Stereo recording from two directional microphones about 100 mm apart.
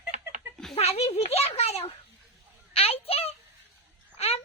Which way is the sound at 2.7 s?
75° left (ahead or behind).